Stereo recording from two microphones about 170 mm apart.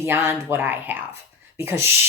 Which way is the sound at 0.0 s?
15° right (ahead or behind).